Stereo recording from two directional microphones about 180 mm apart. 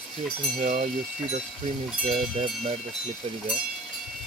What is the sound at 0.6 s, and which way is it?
Speech, 45° right (ahead or behind).